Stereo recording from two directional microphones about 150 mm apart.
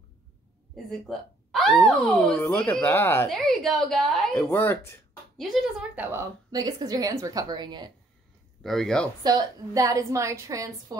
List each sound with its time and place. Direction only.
1.0 s speech: centre (ahead or behind)
3.3 s a woman's voice: centre (ahead or behind)
4.4 s speech: 15° left (ahead or behind)
5.4 s a woman's voice: centre (ahead or behind)
6.5 s a woman's voice: 25° right (ahead or behind)
8.6 s a woman's voice: 5° left (ahead or behind)
9.2 s a woman's voice: 25° right (ahead or behind)